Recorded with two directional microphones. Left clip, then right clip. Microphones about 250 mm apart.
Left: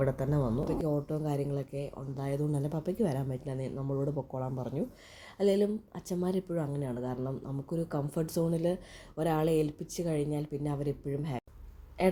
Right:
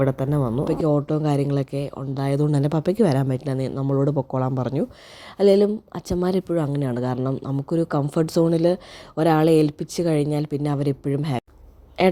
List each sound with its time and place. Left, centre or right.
0.0 s a woman's voice: right